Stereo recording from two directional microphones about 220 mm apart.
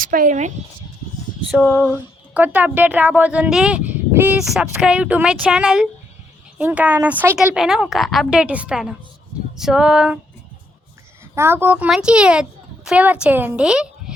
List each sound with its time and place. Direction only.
0.0 s speech: 40° right (ahead or behind)
1.5 s speech: centre (ahead or behind)
11.3 s speech: 10° right (ahead or behind)